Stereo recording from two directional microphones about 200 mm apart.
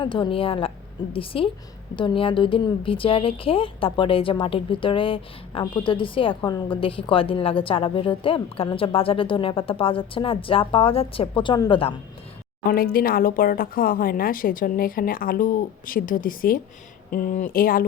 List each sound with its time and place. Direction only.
0.0 s speech: 25° left (ahead or behind)
12.6 s speech: 50° left (ahead or behind)